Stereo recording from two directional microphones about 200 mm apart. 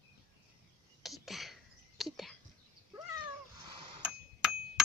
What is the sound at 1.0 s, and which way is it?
Whispering, centre (ahead or behind).